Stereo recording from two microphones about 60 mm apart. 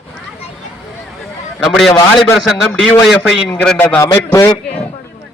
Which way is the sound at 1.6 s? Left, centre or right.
Centre.